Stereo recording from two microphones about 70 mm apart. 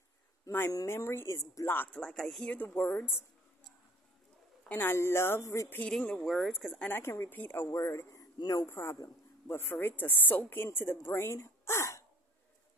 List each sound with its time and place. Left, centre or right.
0.5 s speech: left
0.8 s a woman's voice: left
2.0 s speech: centre
2.4 s speech: left
4.6 s a woman's voice: left
5.9 s speech: centre
6.2 s speech: centre
7.0 s a woman's voice: left
7.6 s a woman's voice: left